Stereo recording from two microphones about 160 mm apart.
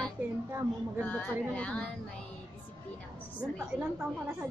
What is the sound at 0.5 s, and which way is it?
Speech, 15° right (ahead or behind).